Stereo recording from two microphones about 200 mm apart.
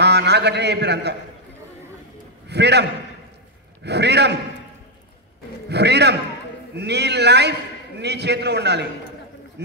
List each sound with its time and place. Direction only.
0.0 s a man's voice: 55° right (ahead or behind)
2.4 s a man's voice: 55° right (ahead or behind)
5.7 s a man's voice: 55° right (ahead or behind)